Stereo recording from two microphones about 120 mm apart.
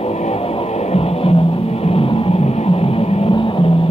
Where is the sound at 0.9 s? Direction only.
55° left (ahead or behind).